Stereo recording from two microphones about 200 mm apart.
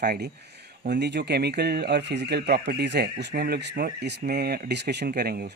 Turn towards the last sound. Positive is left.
turn(degrees=-50)  # may be behind; listen again after turning